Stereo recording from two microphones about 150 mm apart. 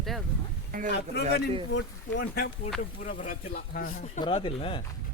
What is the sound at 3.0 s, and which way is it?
Speech, 65° left (ahead or behind).